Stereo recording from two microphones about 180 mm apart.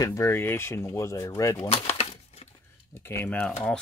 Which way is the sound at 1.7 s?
35° left (ahead or behind).